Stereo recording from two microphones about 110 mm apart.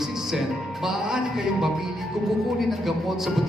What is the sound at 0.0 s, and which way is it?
A man's voice, 5° right (ahead or behind).